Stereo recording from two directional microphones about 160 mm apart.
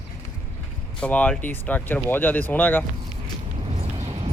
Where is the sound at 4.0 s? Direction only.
40° right (ahead or behind).